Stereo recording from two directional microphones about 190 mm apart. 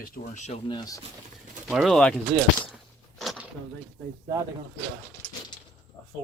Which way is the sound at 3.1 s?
Centre (ahead or behind).